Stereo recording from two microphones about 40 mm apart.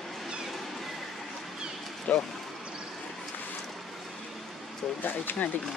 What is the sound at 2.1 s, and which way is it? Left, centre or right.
Speech, left.